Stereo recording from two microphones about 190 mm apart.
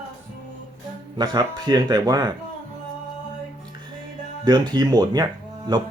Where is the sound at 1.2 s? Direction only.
20° right (ahead or behind).